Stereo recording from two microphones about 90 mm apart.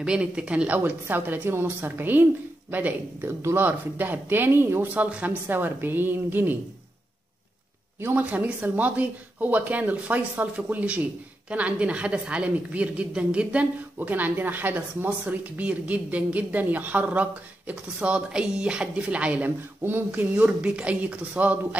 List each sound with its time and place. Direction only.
0.0 s a woman's voice: 10° right (ahead or behind); by 4.8 s 25° right (ahead or behind)
4.9 s a woman's voice: 15° right (ahead or behind)
8.0 s speech: 20° right (ahead or behind)